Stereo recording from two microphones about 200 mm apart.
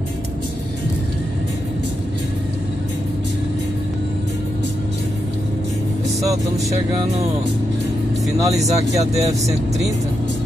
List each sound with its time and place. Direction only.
8.4 s speech: 15° right (ahead or behind)
8.6 s speech: 35° right (ahead or behind)